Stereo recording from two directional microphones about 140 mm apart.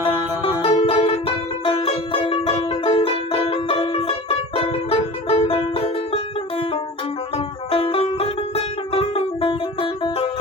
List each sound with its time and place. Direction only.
0.6 s music: 45° left (ahead or behind)
7.3 s music: 45° left (ahead or behind)